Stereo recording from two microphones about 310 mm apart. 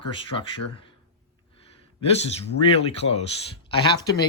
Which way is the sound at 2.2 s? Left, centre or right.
Centre.